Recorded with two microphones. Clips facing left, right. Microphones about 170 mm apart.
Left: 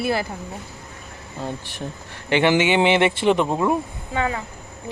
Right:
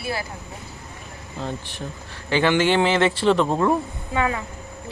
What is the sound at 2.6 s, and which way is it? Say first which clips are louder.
Speech: even; 10° left (ahead or behind).